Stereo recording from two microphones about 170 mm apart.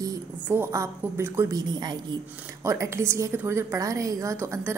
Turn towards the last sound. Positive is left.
turn(degrees=-15)  # may be behind; listen again after turning